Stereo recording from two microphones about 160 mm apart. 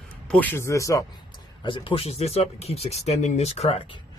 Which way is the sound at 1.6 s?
30° left (ahead or behind).